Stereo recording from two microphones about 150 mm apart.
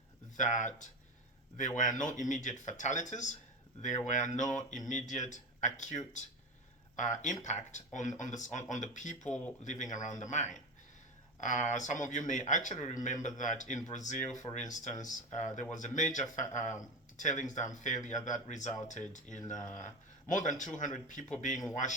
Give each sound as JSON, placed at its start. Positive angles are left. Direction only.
{"t": 0.3, "sound": "speech", "side_deg": 55}
{"t": 9.2, "sound": "speech", "side_deg": 5}
{"t": 9.6, "sound": "speech", "side_deg": 55}
{"t": 14.5, "sound": "speech", "side_deg": 30}
{"t": 14.8, "sound": "a man's voice", "side_deg": 55}